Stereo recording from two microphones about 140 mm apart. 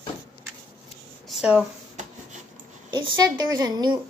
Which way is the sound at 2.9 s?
35° right (ahead or behind).